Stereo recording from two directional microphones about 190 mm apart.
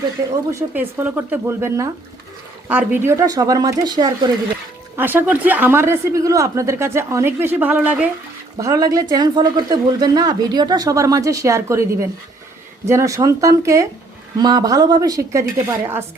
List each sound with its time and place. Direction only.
0.5 s speech: 10° right (ahead or behind)
4.9 s speech: 10° right (ahead or behind)
8.5 s speech: 20° right (ahead or behind)